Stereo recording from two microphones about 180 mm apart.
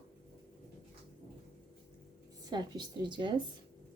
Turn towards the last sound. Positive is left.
turn(degrees=-25)  # may be behind; listen again after turning